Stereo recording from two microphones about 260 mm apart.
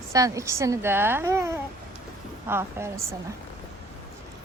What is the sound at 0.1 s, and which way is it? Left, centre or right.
A woman's voice, centre.